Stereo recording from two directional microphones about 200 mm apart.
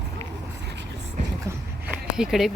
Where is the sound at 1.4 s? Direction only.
5° right (ahead or behind).